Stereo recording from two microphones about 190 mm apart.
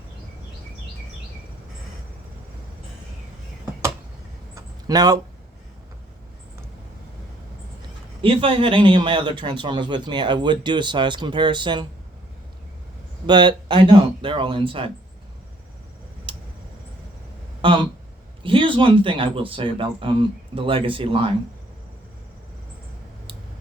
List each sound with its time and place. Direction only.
4.5 s a sound: 20° right (ahead or behind)
8.2 s speech: 30° right (ahead or behind)
13.2 s speech: 25° right (ahead or behind)
16.3 s tick: 25° right (ahead or behind)
17.6 s speech: 25° right (ahead or behind)